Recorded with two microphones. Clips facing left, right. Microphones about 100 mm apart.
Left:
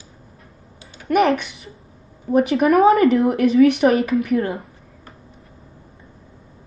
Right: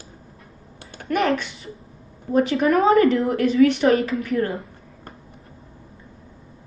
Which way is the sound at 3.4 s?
30° right (ahead or behind).